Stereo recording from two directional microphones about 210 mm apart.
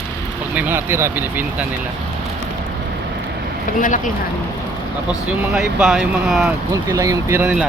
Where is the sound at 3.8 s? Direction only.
40° left (ahead or behind).